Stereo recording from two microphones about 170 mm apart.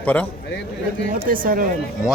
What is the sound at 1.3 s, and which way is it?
Speech, 55° right (ahead or behind).